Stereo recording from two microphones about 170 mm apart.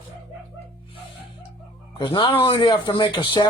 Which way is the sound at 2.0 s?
30° left (ahead or behind).